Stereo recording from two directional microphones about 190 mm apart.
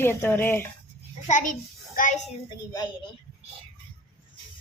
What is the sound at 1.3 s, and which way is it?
Speech, 40° left (ahead or behind).